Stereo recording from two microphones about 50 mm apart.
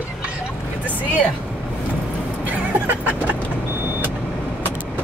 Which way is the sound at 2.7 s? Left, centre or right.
Right.